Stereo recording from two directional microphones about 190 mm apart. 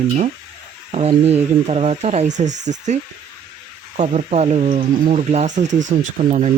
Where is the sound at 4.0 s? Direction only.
35° right (ahead or behind).